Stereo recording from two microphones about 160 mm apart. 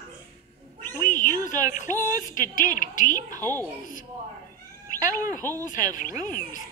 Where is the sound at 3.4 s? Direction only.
15° left (ahead or behind).